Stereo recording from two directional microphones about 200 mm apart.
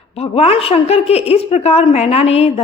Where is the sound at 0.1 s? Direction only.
30° left (ahead or behind).